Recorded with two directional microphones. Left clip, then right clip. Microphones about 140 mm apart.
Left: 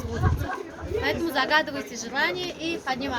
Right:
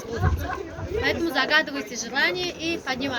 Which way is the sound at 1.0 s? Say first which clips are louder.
Right 2 dB; 60° left (ahead or behind).